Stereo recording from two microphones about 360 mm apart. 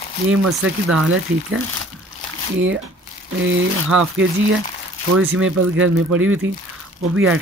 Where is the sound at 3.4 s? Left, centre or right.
Right.